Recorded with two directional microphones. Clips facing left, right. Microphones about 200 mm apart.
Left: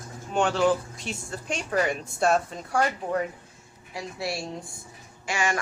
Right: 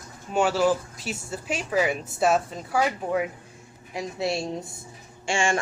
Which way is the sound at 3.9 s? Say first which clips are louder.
Right 4 dB; 20° right (ahead or behind).